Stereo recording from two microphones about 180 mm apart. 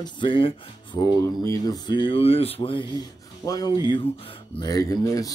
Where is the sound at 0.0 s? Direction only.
25° left (ahead or behind).